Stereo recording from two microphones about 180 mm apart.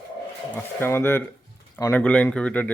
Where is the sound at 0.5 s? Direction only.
10° left (ahead or behind).